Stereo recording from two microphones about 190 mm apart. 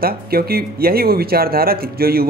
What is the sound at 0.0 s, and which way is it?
Speech, 50° right (ahead or behind).